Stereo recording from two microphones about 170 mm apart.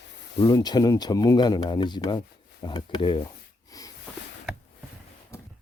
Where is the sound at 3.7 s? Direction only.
20° left (ahead or behind).